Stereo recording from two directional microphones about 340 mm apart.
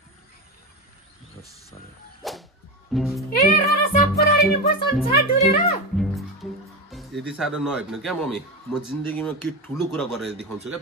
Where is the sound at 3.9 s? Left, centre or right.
Left.